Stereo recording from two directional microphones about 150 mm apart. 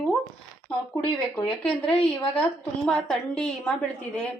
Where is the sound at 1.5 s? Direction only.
5° left (ahead or behind).